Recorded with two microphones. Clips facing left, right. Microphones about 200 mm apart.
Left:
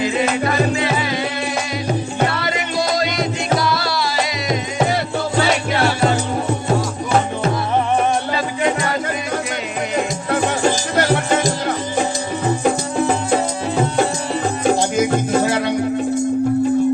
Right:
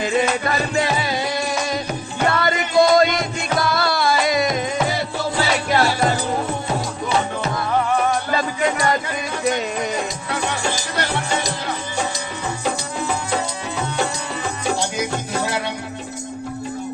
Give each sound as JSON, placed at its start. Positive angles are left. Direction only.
{"t": 2.3, "sound": "music", "side_deg": -50}
{"t": 10.3, "sound": "music", "side_deg": 50}
{"t": 14.8, "sound": "music", "side_deg": 50}